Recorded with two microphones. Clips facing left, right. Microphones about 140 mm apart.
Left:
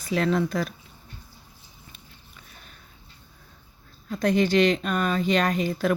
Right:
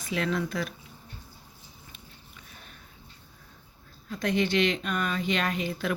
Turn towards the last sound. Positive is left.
turn(degrees=40)  # may be behind; listen again after turning